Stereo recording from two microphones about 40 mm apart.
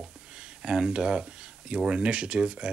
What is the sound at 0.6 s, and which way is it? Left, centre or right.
Speech, centre.